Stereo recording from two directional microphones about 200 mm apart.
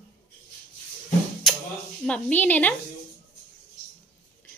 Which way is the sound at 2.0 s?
5° left (ahead or behind).